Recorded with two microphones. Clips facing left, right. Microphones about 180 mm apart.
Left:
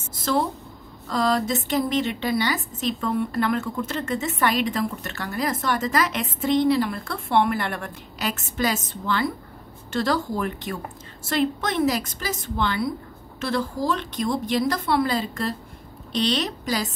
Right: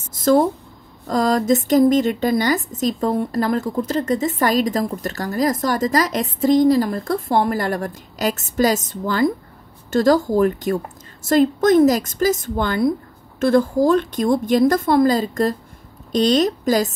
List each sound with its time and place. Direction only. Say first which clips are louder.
0.1 s a woman's voice: right 9 dB; 45° right (ahead or behind)